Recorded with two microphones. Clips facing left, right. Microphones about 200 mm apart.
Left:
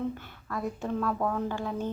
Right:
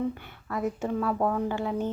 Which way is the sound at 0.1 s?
10° right (ahead or behind).